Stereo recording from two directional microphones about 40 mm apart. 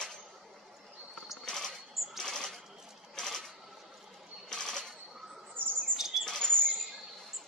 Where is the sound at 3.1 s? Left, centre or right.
Centre.